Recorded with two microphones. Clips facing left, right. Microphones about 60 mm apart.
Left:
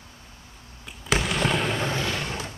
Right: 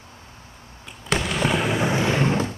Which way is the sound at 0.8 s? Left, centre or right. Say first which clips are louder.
Right 1 dB; centre.